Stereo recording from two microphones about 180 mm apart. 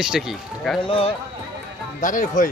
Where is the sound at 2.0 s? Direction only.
45° left (ahead or behind).